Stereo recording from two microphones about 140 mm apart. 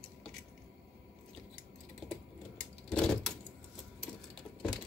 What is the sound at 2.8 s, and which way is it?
Vehicle, 5° left (ahead or behind).